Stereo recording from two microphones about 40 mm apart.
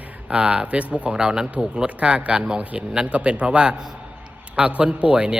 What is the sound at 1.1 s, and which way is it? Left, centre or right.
A man's voice, right.